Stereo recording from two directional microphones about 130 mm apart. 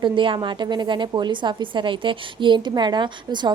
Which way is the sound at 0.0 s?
40° right (ahead or behind).